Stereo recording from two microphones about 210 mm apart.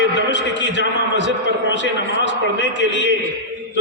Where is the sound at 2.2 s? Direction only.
60° left (ahead or behind).